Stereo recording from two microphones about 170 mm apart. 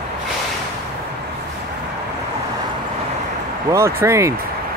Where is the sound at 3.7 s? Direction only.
15° right (ahead or behind).